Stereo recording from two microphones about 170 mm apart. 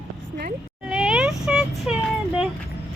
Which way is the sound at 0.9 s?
5° right (ahead or behind).